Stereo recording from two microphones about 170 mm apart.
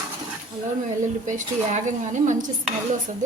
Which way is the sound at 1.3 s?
45° right (ahead or behind).